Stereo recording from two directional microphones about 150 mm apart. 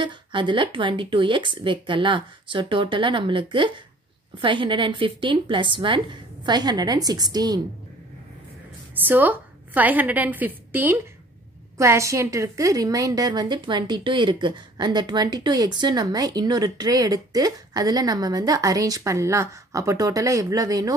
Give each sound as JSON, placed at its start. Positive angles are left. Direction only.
{"t": 0.0, "sound": "speech", "side_deg": -35}
{"t": 9.0, "sound": "a woman's voice", "side_deg": -10}